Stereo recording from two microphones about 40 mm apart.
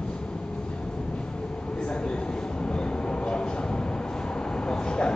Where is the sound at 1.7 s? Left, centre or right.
Left.